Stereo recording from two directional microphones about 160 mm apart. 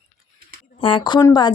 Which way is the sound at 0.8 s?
30° left (ahead or behind).